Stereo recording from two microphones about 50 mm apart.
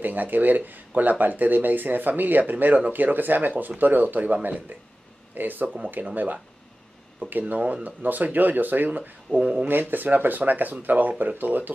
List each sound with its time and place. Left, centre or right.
0.0 s speech: right
9.3 s speech: centre
9.7 s speech: right